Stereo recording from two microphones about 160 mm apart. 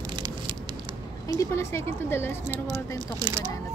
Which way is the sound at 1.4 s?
15° left (ahead or behind).